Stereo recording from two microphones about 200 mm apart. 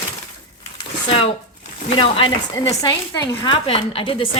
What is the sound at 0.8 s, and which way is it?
A woman's voice, 25° left (ahead or behind).